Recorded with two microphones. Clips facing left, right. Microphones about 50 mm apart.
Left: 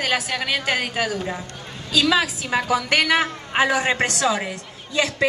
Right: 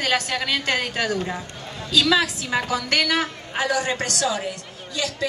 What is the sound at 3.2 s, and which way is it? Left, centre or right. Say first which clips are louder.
A woman's voice: left 5 dB; left.